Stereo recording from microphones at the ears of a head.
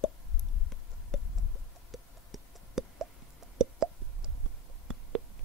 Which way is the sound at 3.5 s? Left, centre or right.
Right.